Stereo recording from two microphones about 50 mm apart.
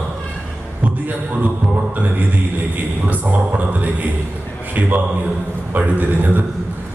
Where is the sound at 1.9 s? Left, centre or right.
Right.